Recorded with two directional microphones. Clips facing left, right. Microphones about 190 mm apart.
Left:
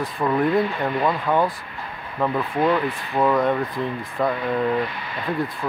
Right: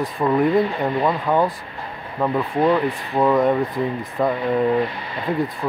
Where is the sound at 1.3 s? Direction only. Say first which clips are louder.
Right 2 dB; 20° right (ahead or behind).